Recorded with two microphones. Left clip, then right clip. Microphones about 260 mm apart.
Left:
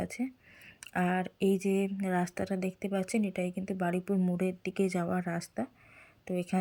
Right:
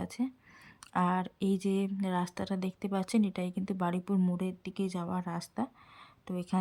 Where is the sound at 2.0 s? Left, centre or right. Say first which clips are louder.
Left 2 dB; centre.